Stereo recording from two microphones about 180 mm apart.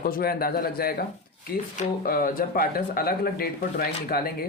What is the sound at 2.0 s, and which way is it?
Speech, 55° left (ahead or behind).